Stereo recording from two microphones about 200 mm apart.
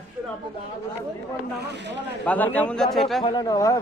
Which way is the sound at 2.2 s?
10° left (ahead or behind).